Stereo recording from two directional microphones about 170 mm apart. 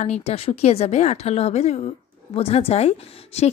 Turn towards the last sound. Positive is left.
turn(degrees=40)  # may be behind; listen again after turning